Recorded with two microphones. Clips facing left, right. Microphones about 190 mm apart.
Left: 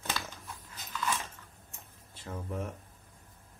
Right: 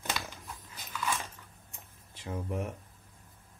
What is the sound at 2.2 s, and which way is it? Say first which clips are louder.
Speech: right 2 dB; 15° right (ahead or behind).